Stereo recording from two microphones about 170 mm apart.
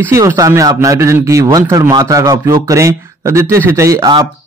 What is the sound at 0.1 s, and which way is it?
A man's voice, 20° right (ahead or behind).